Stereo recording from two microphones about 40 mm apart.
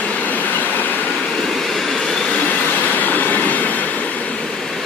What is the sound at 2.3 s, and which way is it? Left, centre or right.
Train, left.